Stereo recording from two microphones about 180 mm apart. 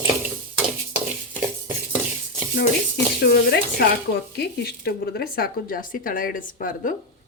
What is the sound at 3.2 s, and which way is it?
Speech, 65° left (ahead or behind).